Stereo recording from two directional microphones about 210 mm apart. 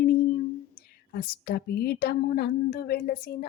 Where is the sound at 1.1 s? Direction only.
45° left (ahead or behind).